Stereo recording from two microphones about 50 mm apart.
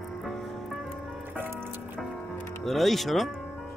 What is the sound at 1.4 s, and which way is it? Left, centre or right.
Music, right.